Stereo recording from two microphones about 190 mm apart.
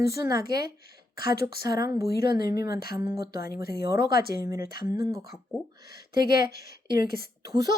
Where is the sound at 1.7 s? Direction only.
20° right (ahead or behind).